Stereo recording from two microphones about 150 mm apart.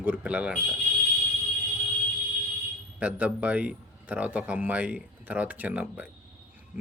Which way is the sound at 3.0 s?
10° right (ahead or behind).